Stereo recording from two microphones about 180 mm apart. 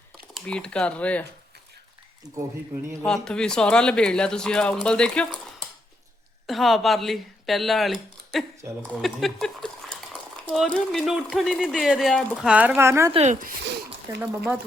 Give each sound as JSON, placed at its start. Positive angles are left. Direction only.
{"t": 0.3, "sound": "speech", "side_deg": 5}
{"t": 3.0, "sound": "speech", "side_deg": 5}
{"t": 13.7, "sound": "a sound", "side_deg": -65}